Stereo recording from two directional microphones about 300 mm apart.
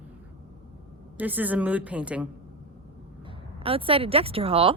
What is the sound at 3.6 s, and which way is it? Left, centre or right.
Speech, centre.